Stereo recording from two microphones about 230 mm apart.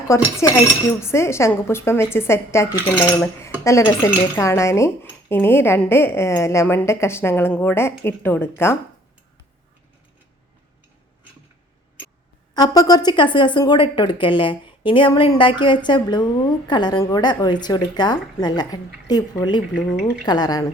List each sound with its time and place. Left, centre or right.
0.1 s a woman's voice: centre
12.5 s a woman's voice: centre